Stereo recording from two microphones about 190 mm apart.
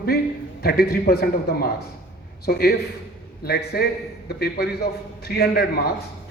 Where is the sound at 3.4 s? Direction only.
55° left (ahead or behind).